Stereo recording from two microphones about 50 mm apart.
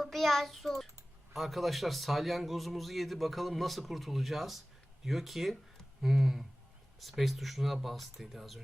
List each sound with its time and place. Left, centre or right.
0.0 s a man's voice: centre
6.0 s a sound: centre
7.0 s a man's voice: centre